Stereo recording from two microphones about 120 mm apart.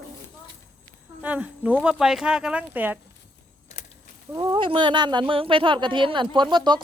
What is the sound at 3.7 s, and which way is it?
Keys jangling, 70° left (ahead or behind).